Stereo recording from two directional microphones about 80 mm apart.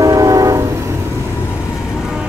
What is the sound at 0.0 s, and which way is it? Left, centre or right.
Train, right.